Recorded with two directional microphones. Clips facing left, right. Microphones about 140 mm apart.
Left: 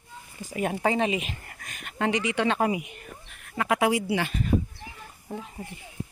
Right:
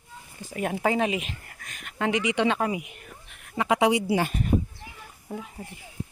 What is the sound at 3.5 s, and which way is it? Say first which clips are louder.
Speech: right 2 dB; 20° right (ahead or behind).